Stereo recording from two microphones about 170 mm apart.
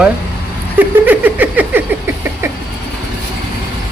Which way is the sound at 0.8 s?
10° right (ahead or behind).